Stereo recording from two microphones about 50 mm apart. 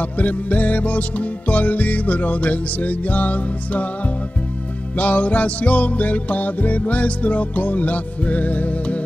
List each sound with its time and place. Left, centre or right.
0.0 s music: left
4.9 s music: left